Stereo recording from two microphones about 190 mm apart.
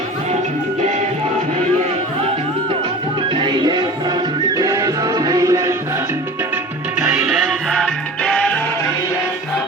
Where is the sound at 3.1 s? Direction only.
25° right (ahead or behind); by 8.8 s 10° left (ahead or behind).